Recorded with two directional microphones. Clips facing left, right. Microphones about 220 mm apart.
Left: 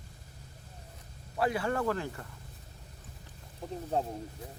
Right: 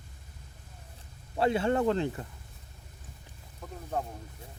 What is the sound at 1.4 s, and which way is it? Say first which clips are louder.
Speech: right 4 dB; 25° right (ahead or behind).